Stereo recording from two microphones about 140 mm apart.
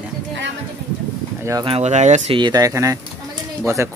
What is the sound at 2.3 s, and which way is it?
Speech, 30° right (ahead or behind).